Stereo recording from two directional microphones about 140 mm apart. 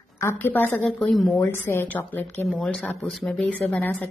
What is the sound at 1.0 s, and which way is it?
Speech, centre (ahead or behind).